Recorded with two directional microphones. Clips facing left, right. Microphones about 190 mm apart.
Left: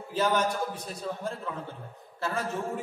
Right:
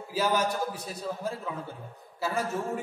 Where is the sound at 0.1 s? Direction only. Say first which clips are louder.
Left 1 dB; 5° right (ahead or behind).